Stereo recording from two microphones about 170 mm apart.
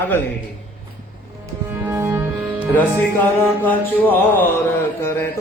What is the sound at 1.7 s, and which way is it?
Music, 15° right (ahead or behind).